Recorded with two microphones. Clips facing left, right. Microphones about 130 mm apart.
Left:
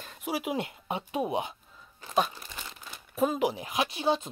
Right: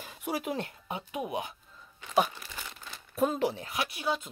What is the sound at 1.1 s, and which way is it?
Speech, 30° left (ahead or behind).